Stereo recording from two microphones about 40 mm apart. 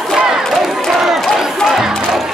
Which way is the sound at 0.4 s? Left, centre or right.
Centre.